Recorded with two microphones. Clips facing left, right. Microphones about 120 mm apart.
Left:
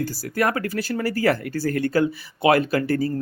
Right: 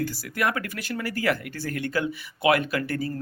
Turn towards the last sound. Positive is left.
turn(degrees=35)  # may be behind; listen again after turning